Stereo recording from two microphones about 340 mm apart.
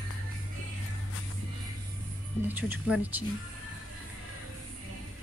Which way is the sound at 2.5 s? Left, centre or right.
Centre.